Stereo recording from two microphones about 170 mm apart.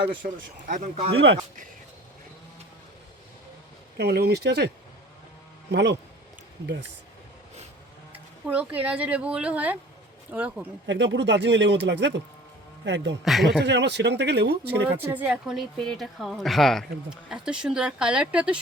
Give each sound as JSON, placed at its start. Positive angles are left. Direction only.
{"t": 0.2, "sound": "speech", "side_deg": -50}
{"t": 3.9, "sound": "speech", "side_deg": -70}
{"t": 5.7, "sound": "speech", "side_deg": -90}
{"t": 8.1, "sound": "speech", "side_deg": -10}
{"t": 10.8, "sound": "speech", "side_deg": -90}
{"t": 13.2, "sound": "a woman's voice", "side_deg": 0}
{"t": 13.7, "sound": "speech", "side_deg": -90}
{"t": 15.0, "sound": "a woman's voice", "side_deg": -10}